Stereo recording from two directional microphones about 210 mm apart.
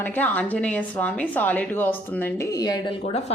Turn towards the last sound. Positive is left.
turn(degrees=30)  # may be behind; listen again after turning